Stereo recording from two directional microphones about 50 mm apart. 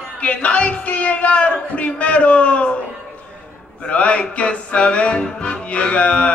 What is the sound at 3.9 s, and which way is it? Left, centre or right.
Music, left.